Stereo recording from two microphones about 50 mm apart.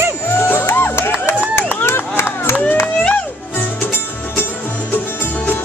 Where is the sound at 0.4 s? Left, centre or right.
Left.